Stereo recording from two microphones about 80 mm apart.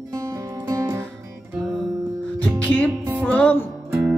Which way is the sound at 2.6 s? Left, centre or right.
Left.